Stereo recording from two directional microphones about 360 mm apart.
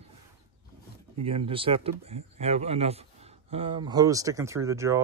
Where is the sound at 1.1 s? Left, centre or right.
Centre.